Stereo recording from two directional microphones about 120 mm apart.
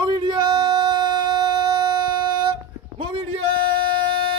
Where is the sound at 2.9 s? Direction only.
55° right (ahead or behind).